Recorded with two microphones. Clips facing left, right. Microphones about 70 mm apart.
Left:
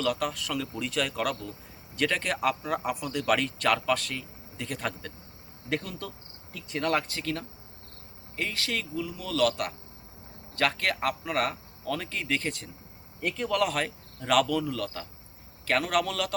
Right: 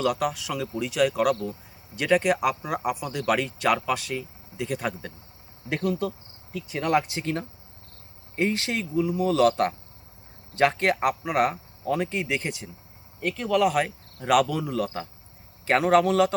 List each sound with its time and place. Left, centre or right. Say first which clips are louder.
0.0 s speech: right 4 dB; centre